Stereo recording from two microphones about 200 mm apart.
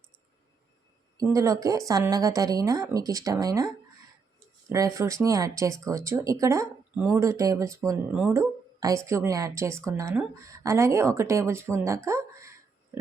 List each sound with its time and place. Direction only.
1.2 s speech: 15° right (ahead or behind)
4.7 s speech: 15° right (ahead or behind)
12.0 s a sound: 15° right (ahead or behind)